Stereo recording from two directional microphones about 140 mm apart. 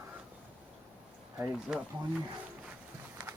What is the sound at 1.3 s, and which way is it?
Speech, 5° right (ahead or behind).